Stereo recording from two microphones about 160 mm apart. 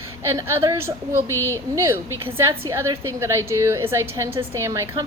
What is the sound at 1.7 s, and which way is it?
A woman's voice, 15° right (ahead or behind).